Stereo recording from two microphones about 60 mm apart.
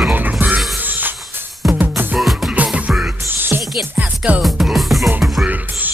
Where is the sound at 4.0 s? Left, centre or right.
Right.